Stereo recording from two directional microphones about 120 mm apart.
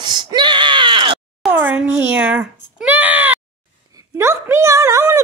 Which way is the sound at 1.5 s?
15° right (ahead or behind).